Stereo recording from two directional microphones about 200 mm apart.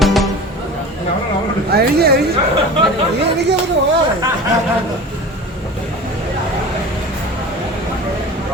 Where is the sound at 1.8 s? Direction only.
50° right (ahead or behind).